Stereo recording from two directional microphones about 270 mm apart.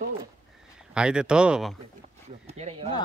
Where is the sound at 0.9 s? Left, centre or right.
Centre.